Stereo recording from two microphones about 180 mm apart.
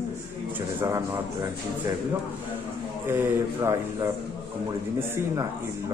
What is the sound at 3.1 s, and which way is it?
A man's voice, 15° right (ahead or behind).